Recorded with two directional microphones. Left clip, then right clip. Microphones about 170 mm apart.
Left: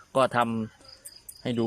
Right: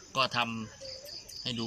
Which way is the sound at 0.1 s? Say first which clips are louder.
Left 6 dB; 50° left (ahead or behind).